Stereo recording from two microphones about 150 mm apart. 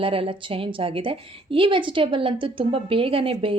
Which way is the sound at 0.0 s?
35° right (ahead or behind).